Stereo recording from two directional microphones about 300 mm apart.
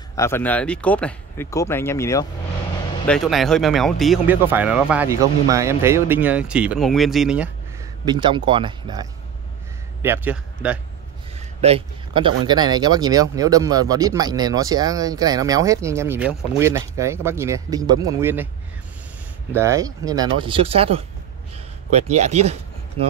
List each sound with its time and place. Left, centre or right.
0.1 s speech: centre
8.0 s speech: centre
10.0 s speech: centre
11.3 s a sound: centre
12.4 s speech: centre
19.5 s speech: centre
22.1 s speech: right